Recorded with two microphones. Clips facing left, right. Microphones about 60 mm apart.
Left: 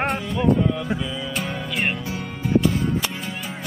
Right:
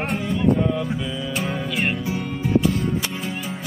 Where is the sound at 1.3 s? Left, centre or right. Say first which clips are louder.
Right 4 dB; centre.